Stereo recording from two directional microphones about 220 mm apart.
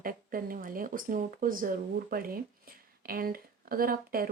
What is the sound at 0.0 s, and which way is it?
Speech, 40° right (ahead or behind).